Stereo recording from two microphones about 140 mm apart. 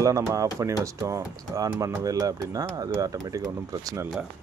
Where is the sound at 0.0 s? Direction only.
20° right (ahead or behind).